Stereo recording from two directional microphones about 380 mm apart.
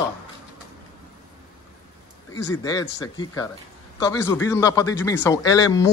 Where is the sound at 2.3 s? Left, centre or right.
Centre.